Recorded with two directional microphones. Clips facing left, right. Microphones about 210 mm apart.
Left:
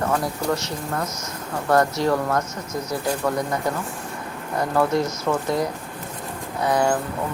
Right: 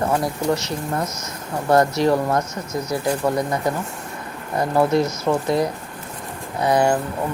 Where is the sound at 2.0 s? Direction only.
20° right (ahead or behind).